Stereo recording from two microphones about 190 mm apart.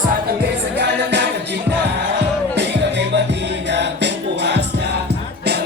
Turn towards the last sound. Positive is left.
turn(degrees=-65)  # may be behind; listen again after turning